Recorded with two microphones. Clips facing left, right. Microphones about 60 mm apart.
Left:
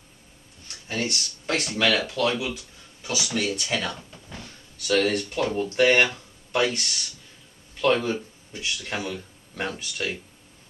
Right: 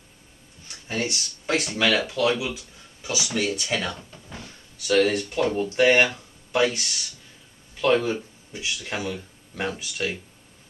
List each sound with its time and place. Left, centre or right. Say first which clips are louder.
0.7 s speech: right 1 dB; centre